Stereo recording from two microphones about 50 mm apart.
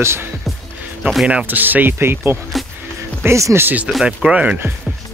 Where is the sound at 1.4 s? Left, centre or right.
Right.